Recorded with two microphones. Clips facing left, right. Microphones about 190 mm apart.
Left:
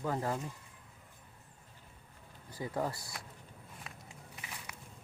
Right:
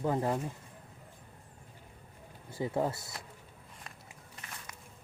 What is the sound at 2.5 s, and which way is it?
Speech, 25° right (ahead or behind).